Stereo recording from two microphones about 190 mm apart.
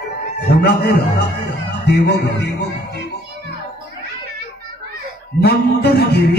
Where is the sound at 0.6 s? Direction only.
60° left (ahead or behind).